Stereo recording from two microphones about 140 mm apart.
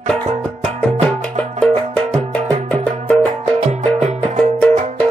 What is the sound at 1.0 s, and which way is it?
Music, 10° left (ahead or behind).